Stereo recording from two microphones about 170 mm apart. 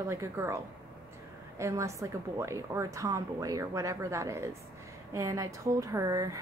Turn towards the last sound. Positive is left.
turn(degrees=-20)  # may be behind; listen again after turning